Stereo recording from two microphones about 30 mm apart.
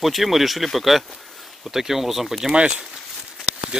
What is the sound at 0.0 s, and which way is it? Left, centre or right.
Speech, centre.